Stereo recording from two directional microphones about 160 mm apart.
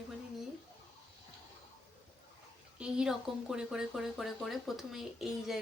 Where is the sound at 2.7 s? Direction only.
5° right (ahead or behind).